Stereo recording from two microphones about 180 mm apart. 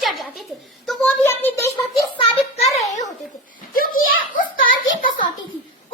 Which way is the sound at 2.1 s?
35° left (ahead or behind).